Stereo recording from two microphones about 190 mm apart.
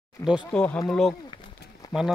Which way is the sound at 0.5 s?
5° left (ahead or behind).